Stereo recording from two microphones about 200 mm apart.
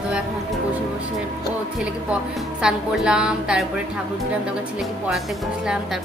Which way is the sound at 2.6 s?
5° right (ahead or behind).